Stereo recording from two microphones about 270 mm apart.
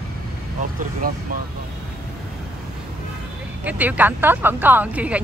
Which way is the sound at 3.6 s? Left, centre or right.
Centre.